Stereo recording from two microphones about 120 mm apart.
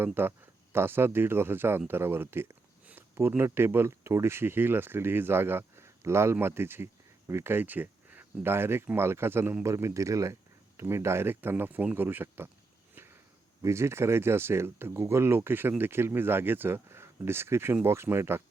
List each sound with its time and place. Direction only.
0.0 s speech: 20° right (ahead or behind)
13.6 s speech: 25° right (ahead or behind)